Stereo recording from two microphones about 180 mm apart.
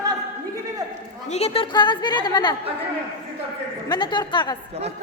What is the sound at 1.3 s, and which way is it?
A woman's voice, 35° left (ahead or behind).